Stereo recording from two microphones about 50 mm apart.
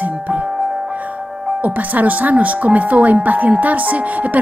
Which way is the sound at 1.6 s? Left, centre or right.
Right.